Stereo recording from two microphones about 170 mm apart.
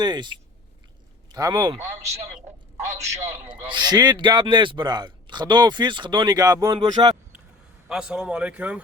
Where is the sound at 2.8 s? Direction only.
15° right (ahead or behind).